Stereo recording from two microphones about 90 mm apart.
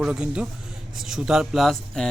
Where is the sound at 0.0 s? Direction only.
10° right (ahead or behind).